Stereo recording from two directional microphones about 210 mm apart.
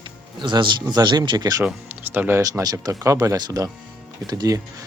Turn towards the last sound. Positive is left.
turn(degrees=-15)  # may be behind; listen again after turning